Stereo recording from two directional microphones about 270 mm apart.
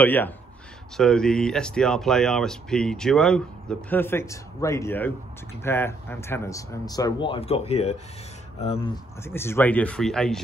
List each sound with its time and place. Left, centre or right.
0.0 s speech: centre
9.2 s speech: centre